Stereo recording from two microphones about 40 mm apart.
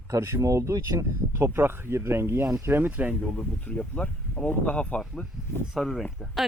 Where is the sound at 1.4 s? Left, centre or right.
Right.